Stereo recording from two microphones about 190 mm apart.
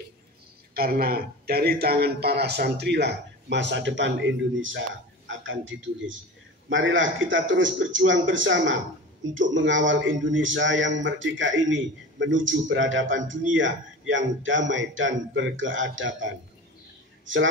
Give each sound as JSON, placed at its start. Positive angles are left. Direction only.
{"t": 0.7, "sound": "a man's voice", "side_deg": -55}